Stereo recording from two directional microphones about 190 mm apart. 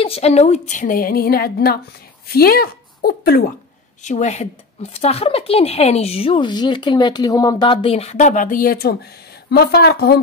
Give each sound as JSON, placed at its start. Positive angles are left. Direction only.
{"t": 0.0, "sound": "a woman's voice", "side_deg": 30}
{"t": 4.0, "sound": "a woman's voice", "side_deg": 40}